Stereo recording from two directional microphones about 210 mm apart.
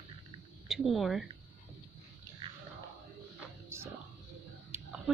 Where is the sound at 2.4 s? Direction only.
25° right (ahead or behind).